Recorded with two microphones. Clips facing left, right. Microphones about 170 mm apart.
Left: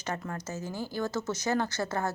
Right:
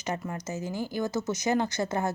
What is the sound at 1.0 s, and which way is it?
A woman's voice, 15° right (ahead or behind).